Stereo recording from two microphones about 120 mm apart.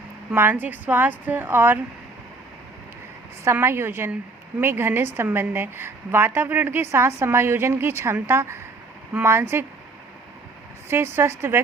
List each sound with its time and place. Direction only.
0.3 s speech: 15° right (ahead or behind)
3.4 s a woman's voice: 20° right (ahead or behind)
10.8 s a woman's voice: 20° right (ahead or behind)